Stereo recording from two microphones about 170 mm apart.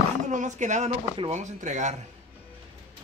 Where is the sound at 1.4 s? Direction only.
45° right (ahead or behind).